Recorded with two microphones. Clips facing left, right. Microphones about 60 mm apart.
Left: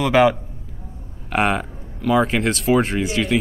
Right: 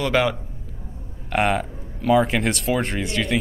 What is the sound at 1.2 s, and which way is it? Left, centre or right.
Speech, centre.